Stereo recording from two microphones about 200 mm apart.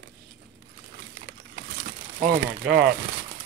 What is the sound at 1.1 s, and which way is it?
Crumpling, 45° right (ahead or behind).